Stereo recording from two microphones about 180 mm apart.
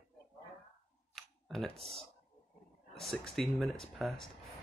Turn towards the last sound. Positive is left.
turn(degrees=0)  # may be behind; listen again after turning